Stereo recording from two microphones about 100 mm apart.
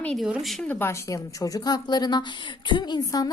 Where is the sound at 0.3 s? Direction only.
5° right (ahead or behind).